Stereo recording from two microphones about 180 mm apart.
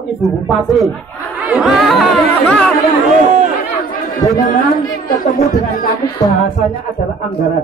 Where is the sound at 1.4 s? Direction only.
5° right (ahead or behind).